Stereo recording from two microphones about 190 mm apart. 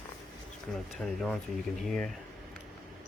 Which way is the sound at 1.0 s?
Centre (ahead or behind).